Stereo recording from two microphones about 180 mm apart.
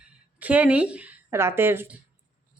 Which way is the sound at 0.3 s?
10° right (ahead or behind).